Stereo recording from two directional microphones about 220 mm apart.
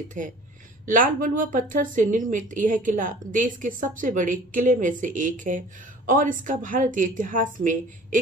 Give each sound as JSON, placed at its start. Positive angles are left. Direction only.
{"t": 0.2, "sound": "speech", "side_deg": -35}